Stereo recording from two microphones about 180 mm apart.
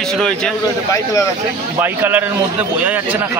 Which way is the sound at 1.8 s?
10° right (ahead or behind).